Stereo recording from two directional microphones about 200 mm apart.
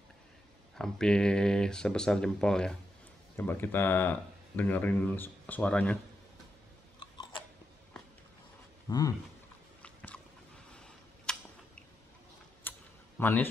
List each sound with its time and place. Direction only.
0.7 s speech: centre (ahead or behind)
8.8 s a sound: 20° left (ahead or behind)
9.8 s biting: 5° left (ahead or behind)
10.7 s a sound: 5° left (ahead or behind)
12.7 s typing: 10° left (ahead or behind)
13.2 s speech: 10° left (ahead or behind)